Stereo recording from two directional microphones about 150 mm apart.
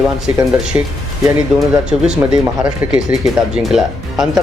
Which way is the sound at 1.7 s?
5° right (ahead or behind).